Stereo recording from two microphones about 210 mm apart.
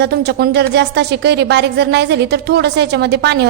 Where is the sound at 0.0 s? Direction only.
50° right (ahead or behind).